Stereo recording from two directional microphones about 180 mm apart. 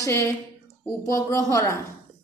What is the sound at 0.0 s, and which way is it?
A woman's voice, 15° left (ahead or behind).